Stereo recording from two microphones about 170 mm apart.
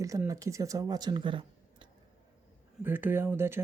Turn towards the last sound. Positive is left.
turn(degrees=-15)  # may be behind; listen again after turning